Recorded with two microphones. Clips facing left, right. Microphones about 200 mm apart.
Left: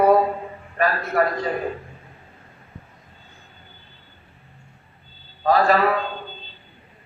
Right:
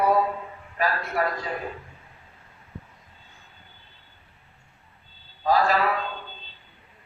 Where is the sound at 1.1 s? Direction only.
60° left (ahead or behind).